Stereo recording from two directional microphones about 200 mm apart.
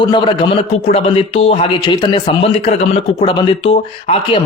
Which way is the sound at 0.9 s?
30° left (ahead or behind).